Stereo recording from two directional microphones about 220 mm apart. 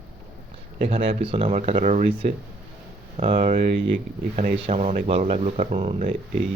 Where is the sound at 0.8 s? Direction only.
25° right (ahead or behind).